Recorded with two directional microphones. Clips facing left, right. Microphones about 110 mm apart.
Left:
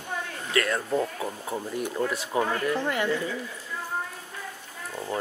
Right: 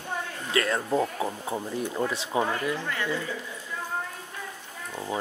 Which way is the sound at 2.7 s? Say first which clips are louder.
Left 4 dB; 15° left (ahead or behind).